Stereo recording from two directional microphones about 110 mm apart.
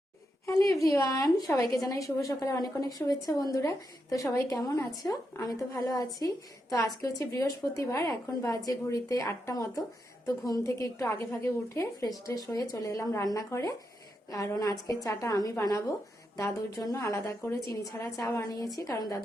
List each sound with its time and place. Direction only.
0.4 s a woman's voice: 30° left (ahead or behind)